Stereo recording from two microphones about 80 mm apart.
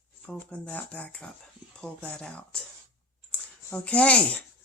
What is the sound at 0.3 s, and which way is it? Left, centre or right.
Speech, centre.